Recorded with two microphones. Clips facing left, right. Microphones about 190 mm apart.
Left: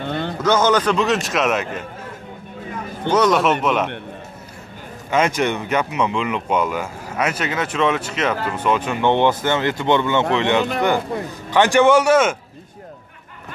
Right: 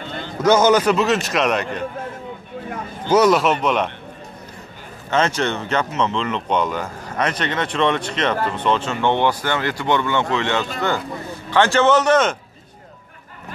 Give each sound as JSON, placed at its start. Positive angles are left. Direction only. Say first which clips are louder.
{"t": 0.0, "sound": "a sound", "louder": "left 6 dB", "side_deg": 60}
{"t": 0.4, "sound": "a man's voice", "louder": "right 3 dB", "side_deg": -10}
{"t": 3.1, "sound": "a man's voice", "louder": "right 1 dB", "side_deg": -5}
{"t": 5.1, "sound": "speech", "louder": "left 1 dB", "side_deg": 10}